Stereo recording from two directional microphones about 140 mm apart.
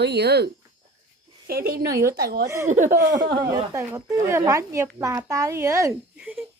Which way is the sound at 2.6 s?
60° right (ahead or behind).